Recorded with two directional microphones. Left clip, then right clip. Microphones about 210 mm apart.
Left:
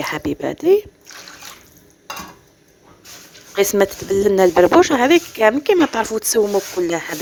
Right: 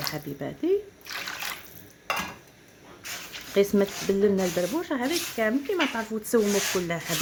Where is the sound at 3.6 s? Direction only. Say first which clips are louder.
Left 7 dB; 50° left (ahead or behind).